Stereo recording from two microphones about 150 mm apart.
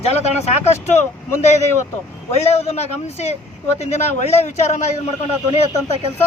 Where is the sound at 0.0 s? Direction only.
45° left (ahead or behind).